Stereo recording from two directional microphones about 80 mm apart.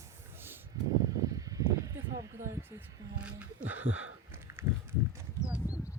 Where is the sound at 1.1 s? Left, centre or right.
Right.